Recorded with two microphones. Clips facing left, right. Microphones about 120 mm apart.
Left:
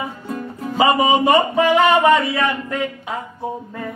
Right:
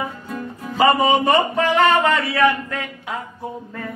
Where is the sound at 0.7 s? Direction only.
10° left (ahead or behind).